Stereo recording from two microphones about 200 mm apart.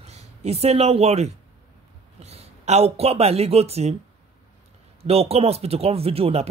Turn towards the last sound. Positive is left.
turn(degrees=-30)  # may be behind; listen again after turning